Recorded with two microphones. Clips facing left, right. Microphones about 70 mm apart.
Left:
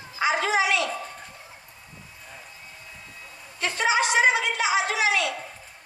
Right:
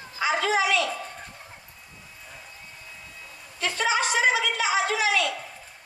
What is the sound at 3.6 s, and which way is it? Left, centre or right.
Speech, left.